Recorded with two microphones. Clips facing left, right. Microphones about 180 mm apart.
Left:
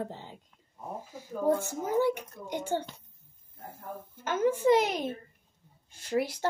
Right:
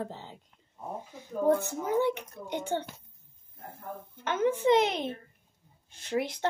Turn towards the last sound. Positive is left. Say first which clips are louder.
# left 1 dB
turn(degrees=10)  # may be behind; listen again after turning